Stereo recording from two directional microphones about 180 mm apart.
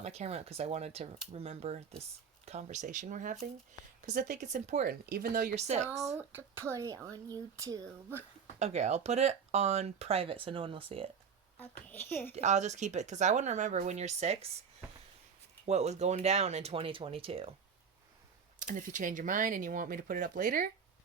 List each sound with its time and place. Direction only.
0.0 s speech: 35° right (ahead or behind)
4.9 s speech: 55° right (ahead or behind)
5.5 s speech: 40° right (ahead or behind)
6.1 s speech: 10° right (ahead or behind)
8.5 s speech: 40° right (ahead or behind)
11.5 s a woman's voice: 10° left (ahead or behind)
12.3 s speech: 40° right (ahead or behind)
15.6 s speech: 40° right (ahead or behind)
18.6 s speech: 45° right (ahead or behind)